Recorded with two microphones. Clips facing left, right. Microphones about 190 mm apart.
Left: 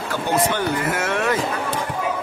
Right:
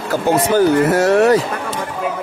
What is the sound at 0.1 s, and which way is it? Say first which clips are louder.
Speech: right 7 dB; 40° right (ahead or behind).